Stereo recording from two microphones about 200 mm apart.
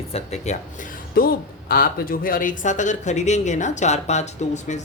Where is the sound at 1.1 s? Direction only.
50° left (ahead or behind).